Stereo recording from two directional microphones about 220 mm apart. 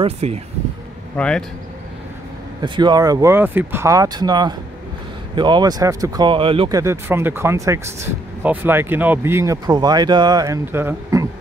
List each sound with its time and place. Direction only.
0.0 s speech: 30° right (ahead or behind)
1.1 s speech: 5° left (ahead or behind)
2.6 s speech: 20° right (ahead or behind)
6.8 s speech: 10° right (ahead or behind)